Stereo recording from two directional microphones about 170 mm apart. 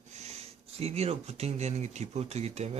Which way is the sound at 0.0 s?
40° right (ahead or behind).